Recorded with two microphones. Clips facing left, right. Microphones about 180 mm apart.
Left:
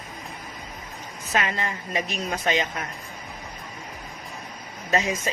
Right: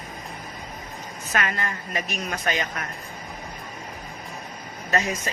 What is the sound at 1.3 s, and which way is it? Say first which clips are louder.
A man's voice: left 1 dB; 20° left (ahead or behind).